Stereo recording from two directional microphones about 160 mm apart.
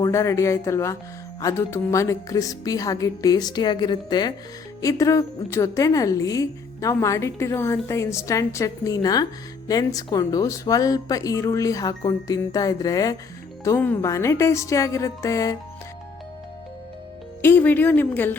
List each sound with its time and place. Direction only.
0.0 s a woman's voice: 20° left (ahead or behind)
17.4 s speech: 10° left (ahead or behind)